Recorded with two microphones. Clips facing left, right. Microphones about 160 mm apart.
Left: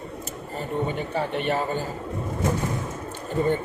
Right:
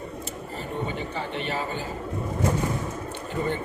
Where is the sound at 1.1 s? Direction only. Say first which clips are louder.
Left 5 dB; 55° left (ahead or behind).